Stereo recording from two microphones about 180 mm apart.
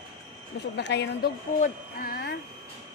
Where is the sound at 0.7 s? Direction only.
70° left (ahead or behind).